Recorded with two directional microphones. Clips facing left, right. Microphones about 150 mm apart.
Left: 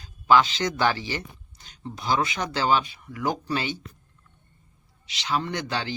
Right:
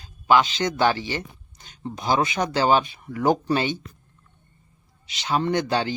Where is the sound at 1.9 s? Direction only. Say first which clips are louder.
Right 3 dB; 20° right (ahead or behind).